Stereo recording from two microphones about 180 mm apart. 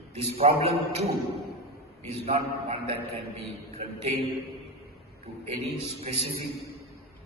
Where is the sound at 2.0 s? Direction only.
35° right (ahead or behind).